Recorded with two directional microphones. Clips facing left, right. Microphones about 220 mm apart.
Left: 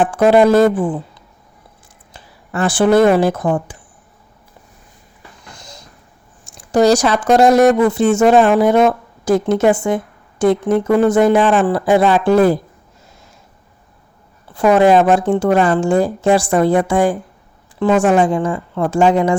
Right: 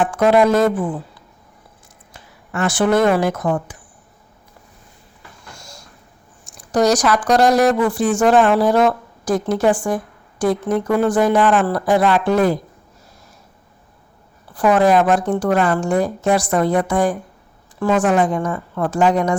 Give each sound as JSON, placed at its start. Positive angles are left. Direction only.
{"t": 0.0, "sound": "speech", "side_deg": 30}
{"t": 2.1, "sound": "speech", "side_deg": 35}
{"t": 5.5, "sound": "a sound", "side_deg": 20}
{"t": 6.6, "sound": "a woman's voice", "side_deg": 25}
{"t": 14.5, "sound": "a woman's voice", "side_deg": 25}